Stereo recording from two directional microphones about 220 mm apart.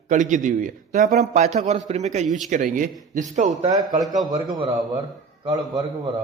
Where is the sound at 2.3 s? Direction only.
Centre (ahead or behind).